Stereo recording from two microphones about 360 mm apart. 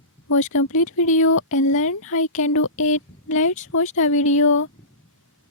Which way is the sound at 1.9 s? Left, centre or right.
Left.